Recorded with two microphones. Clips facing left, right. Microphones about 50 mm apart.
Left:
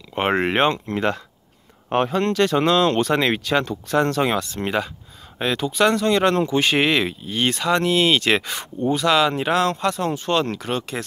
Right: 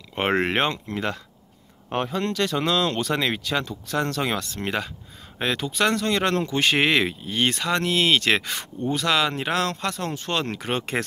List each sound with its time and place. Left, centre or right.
0.1 s speech: centre
0.8 s speech: left
1.9 s speech: left
3.9 s speech: left; by 10.6 s centre
11.0 s speech: right